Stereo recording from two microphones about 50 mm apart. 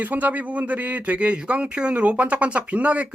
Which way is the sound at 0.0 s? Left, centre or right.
Right.